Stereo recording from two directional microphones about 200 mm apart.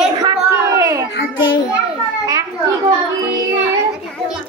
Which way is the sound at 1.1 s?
75° left (ahead or behind).